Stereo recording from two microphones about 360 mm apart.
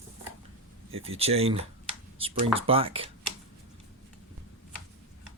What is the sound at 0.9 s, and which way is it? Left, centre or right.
Speech, centre.